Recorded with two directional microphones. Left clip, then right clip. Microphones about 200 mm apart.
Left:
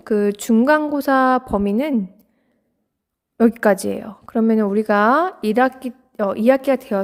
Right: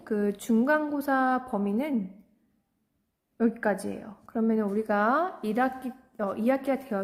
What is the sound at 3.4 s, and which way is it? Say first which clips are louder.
A woman's voice: left 12 dB; 60° left (ahead or behind).